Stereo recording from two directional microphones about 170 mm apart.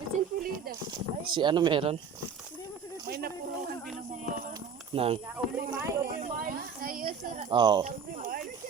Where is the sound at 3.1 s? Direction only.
65° right (ahead or behind).